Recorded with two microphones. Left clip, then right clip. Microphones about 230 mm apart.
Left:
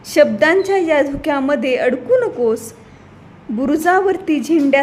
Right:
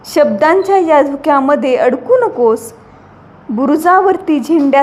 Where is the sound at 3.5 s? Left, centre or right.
Centre.